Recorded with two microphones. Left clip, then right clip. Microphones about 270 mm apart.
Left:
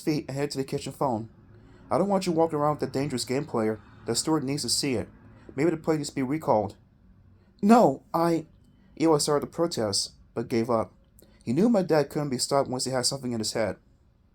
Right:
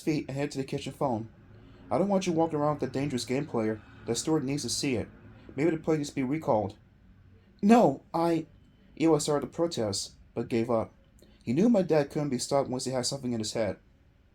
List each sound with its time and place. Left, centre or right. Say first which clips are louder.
0.0 s speech: left 2 dB; left